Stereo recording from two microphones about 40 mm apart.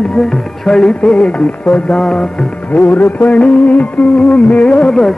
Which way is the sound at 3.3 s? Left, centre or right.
Left.